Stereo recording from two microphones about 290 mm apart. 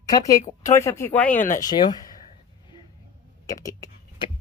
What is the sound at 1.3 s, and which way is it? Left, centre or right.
Speech, left.